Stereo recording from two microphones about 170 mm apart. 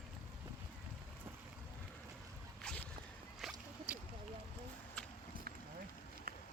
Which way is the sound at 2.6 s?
5° left (ahead or behind).